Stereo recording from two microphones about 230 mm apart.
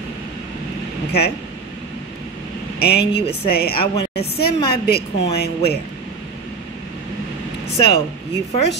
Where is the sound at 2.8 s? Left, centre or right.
Left.